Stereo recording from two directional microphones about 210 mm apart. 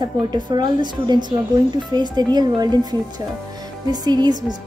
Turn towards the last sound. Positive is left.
turn(degrees=-20)  # may be behind; listen again after turning